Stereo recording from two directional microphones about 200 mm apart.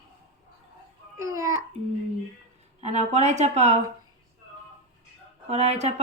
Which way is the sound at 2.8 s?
35° right (ahead or behind).